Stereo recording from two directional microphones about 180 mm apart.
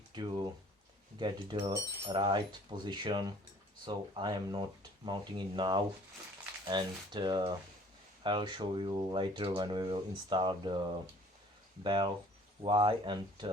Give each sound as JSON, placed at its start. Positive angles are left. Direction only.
{"t": 0.1, "sound": "speech", "side_deg": -25}
{"t": 11.8, "sound": "speech", "side_deg": -25}